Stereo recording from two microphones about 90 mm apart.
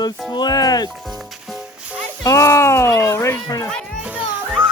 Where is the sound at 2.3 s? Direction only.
35° left (ahead or behind).